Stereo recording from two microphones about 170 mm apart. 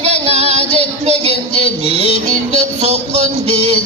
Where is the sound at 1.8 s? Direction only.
35° right (ahead or behind).